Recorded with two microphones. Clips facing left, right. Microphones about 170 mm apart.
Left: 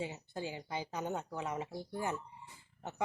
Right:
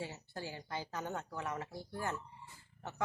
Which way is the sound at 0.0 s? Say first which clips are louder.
Left 3 dB; 20° left (ahead or behind).